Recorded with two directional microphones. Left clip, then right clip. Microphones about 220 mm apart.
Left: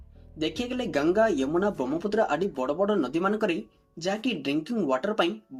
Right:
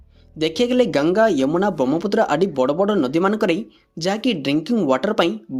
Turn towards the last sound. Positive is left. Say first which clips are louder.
# right 7 dB
turn(degrees=-40)  # may be behind; listen again after turning